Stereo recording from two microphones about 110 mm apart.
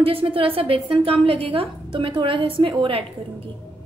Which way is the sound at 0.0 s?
55° right (ahead or behind).